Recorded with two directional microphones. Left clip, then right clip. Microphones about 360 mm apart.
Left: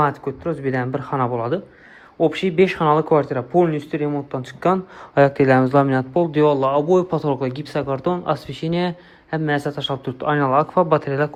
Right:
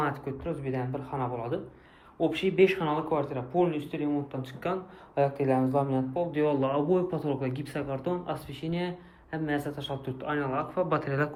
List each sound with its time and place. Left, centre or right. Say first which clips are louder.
0.0 s speech: left 11 dB; centre
5.4 s speech: left 11 dB; left
6.1 s speech: left 11 dB; centre